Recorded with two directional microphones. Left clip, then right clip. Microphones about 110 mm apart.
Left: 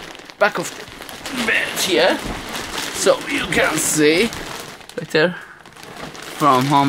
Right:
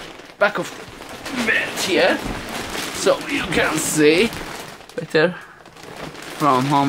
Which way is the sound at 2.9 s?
15° left (ahead or behind).